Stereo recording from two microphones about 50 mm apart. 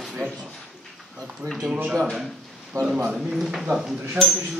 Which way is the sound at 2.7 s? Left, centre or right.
Right.